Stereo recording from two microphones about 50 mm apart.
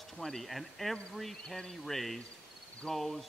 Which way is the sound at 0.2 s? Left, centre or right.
Centre.